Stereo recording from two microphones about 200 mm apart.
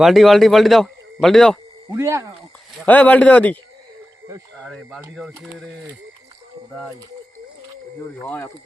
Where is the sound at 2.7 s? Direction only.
5° left (ahead or behind).